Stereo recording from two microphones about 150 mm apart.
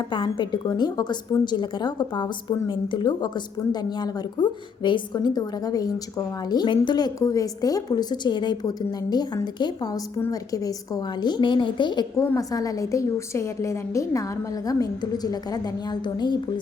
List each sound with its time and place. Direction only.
0.1 s a woman's voice: 30° left (ahead or behind)